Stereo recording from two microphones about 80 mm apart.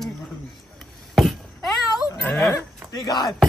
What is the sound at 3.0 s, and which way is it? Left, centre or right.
Speech, left.